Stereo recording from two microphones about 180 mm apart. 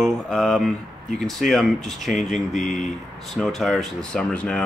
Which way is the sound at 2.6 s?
45° left (ahead or behind).